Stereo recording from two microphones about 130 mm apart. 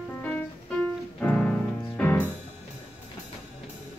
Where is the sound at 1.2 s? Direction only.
10° left (ahead or behind).